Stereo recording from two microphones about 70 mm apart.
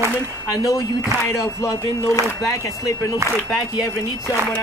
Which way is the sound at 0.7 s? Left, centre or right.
Left.